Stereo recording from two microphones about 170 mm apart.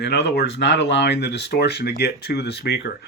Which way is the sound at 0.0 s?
80° left.